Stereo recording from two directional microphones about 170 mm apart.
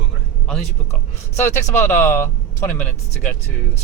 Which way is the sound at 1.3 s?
15° left (ahead or behind).